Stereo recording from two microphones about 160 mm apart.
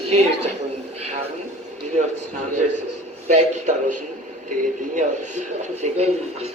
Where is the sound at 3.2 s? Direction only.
50° right (ahead or behind).